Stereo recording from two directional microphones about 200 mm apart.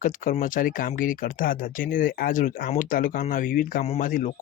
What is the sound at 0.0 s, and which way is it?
Speech, 40° left (ahead or behind).